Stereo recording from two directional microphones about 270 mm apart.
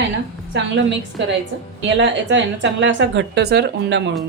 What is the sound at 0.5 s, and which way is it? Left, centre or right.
A woman's voice, right.